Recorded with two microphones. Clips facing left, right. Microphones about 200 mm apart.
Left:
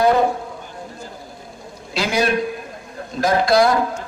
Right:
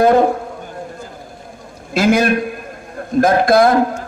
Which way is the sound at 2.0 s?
50° right (ahead or behind).